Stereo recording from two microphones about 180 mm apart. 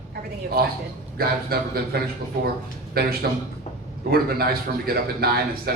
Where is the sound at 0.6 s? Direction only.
55° right (ahead or behind).